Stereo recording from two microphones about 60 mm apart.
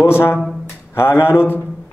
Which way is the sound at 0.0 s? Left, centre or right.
Left.